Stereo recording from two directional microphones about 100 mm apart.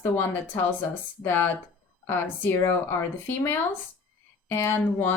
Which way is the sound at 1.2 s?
20° left (ahead or behind).